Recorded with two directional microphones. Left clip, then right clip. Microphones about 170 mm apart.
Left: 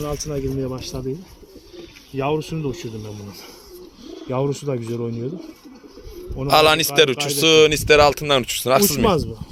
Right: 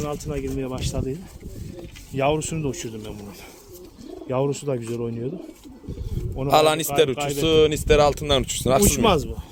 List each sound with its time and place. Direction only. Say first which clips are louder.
0.0 s a man's voice: left 2 dB; 35° left (ahead or behind)
0.6 s speech: left 1 dB; 5° left (ahead or behind)
2.1 s speech: even; 10° right (ahead or behind)
4.3 s speech: left 1 dB; 25° left (ahead or behind)
6.3 s speech: left 3 dB; centre (ahead or behind)